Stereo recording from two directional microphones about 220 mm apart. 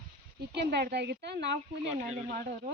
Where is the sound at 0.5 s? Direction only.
50° right (ahead or behind).